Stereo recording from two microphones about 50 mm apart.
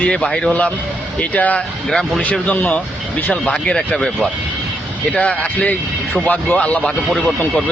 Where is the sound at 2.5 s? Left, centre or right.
Left.